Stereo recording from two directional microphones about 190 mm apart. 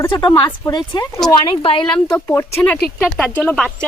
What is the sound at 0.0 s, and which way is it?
A woman's voice, 20° left (ahead or behind).